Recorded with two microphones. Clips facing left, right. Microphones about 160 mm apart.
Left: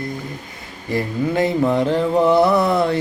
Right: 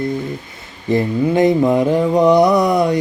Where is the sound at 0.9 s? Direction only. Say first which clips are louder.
Right 5 dB; 20° right (ahead or behind).